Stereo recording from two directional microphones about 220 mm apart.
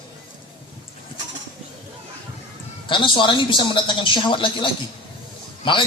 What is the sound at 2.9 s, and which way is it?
A man's voice, 20° left (ahead or behind).